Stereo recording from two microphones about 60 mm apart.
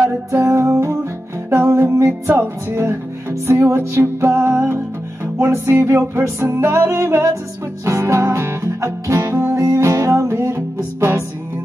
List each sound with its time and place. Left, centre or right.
0.0 s music: right